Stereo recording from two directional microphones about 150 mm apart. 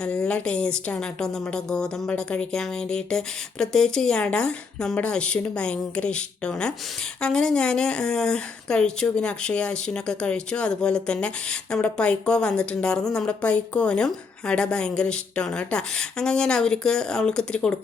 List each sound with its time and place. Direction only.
0.0 s speech: 5° left (ahead or behind)